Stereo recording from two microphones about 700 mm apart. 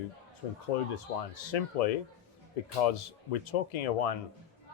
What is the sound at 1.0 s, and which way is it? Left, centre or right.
A man's voice, left.